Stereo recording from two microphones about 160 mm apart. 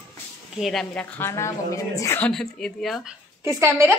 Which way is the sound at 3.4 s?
15° right (ahead or behind).